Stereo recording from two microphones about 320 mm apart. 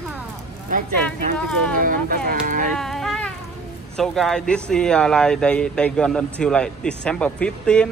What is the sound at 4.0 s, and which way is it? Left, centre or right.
Speech, centre.